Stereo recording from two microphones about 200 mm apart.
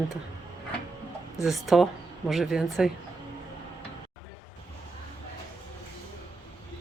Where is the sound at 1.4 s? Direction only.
Centre (ahead or behind).